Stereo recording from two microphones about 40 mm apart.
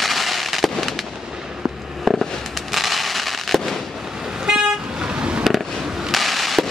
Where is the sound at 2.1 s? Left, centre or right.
Centre.